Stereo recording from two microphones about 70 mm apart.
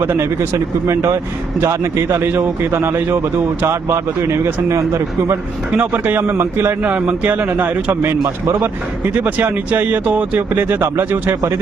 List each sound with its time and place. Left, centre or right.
0.0 s speech: right
0.3 s speech: right
5.7 s speech: right
6.8 s speech: centre